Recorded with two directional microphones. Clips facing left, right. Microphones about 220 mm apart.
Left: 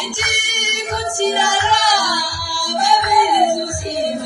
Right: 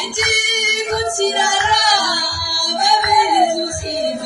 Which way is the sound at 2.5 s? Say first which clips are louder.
Left 1 dB; 15° right (ahead or behind).